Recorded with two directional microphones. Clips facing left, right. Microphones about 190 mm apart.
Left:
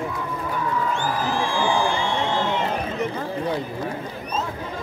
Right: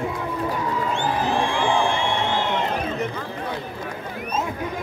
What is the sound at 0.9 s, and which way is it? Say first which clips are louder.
Music: right 2 dB; 20° right (ahead or behind).